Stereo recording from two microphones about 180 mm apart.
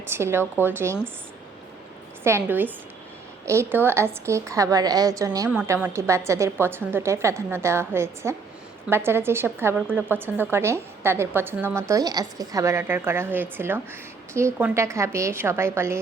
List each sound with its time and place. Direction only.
0.1 s a woman's voice: 15° right (ahead or behind)
2.2 s a woman's voice: 10° right (ahead or behind)